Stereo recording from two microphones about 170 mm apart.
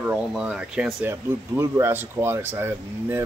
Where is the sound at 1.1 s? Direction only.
15° right (ahead or behind).